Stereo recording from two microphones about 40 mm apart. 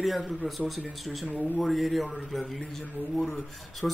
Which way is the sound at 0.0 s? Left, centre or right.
Centre.